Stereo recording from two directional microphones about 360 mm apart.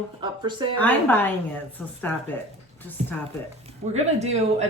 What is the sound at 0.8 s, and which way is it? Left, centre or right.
Speech, centre.